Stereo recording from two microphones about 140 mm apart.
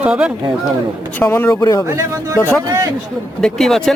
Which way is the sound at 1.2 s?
15° left (ahead or behind).